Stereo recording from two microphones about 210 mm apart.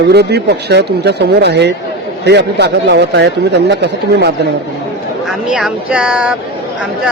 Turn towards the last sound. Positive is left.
turn(degrees=-5)  # may be behind; listen again after turning